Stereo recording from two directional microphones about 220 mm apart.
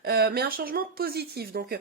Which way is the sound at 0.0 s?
45° right (ahead or behind).